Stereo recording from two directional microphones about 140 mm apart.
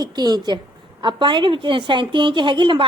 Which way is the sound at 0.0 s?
30° right (ahead or behind).